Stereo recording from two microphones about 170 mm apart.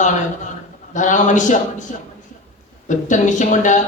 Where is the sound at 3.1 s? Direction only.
45° left (ahead or behind).